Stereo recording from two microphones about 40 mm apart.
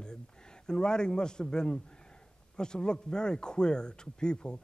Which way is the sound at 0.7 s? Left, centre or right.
Centre.